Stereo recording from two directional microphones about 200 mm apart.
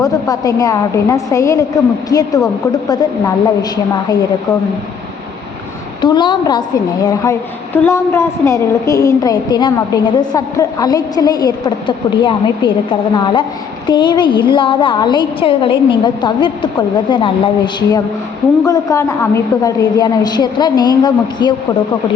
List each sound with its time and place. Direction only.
0.0 s a woman's voice: 15° left (ahead or behind)
6.0 s a woman's voice: 20° left (ahead or behind)